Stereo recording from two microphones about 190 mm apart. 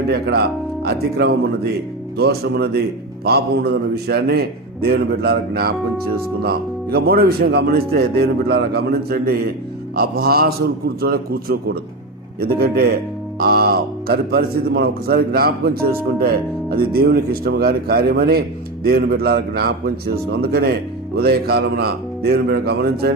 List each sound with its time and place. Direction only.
0.1 s a man's voice: 60° right (ahead or behind)